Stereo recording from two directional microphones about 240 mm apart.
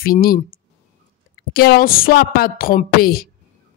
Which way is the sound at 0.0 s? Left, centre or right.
Left.